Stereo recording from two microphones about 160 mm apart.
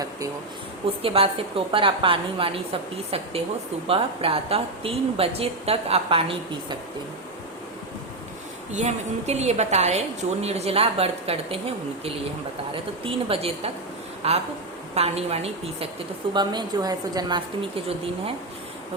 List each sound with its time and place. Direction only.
1.0 s a woman's voice: 35° right (ahead or behind)
3.8 s a woman's voice: 35° right (ahead or behind)
8.7 s a woman's voice: 45° right (ahead or behind)
16.3 s a woman's voice: 25° right (ahead or behind)